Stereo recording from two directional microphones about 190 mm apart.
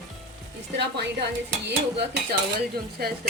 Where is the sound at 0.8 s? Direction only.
60° right (ahead or behind).